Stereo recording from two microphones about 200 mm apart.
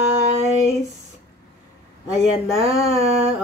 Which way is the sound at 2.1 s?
30° right (ahead or behind).